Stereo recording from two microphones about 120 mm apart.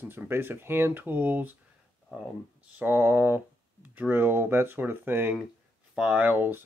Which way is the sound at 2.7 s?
20° right (ahead or behind).